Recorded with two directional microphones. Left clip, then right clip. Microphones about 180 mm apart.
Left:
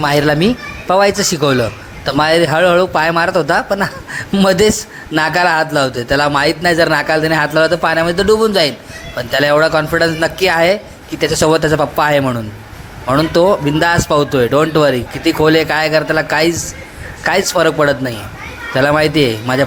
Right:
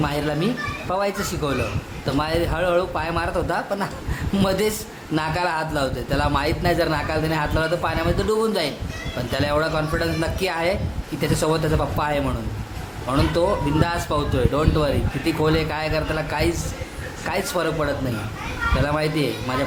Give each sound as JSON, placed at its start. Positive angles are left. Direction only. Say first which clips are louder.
{"t": 0.0, "sound": "speech", "louder": "left 11 dB", "side_deg": 40}